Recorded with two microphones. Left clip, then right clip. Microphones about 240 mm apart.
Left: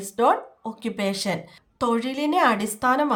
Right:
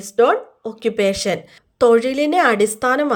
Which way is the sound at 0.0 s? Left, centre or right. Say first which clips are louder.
Right 5 dB; centre.